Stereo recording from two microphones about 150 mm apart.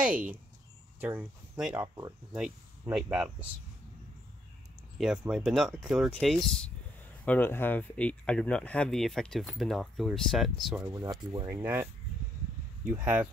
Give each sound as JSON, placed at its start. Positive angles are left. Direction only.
{"t": 0.0, "sound": "speech", "side_deg": -10}
{"t": 2.9, "sound": "speech", "side_deg": -5}
{"t": 4.9, "sound": "speech", "side_deg": -5}
{"t": 10.8, "sound": "speech", "side_deg": -20}
{"t": 11.4, "sound": "speech", "side_deg": -15}